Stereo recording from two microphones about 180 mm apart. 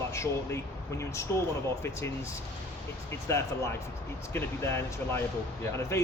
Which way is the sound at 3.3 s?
15° left (ahead or behind).